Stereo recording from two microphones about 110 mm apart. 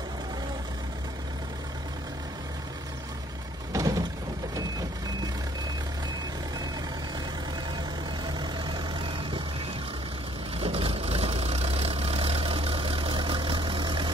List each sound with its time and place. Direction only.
3.7 s a sound: 35° right (ahead or behind)
8.3 s vehicle: 40° right (ahead or behind)
10.6 s vehicle: 60° right (ahead or behind); by 14.1 s 45° right (ahead or behind)